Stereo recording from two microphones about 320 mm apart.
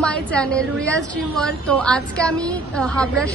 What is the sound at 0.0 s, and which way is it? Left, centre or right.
A woman's voice, centre.